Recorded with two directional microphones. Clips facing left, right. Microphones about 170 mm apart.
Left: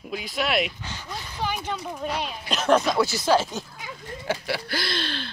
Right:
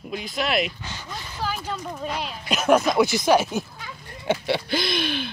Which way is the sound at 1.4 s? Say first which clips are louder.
Even; centre (ahead or behind).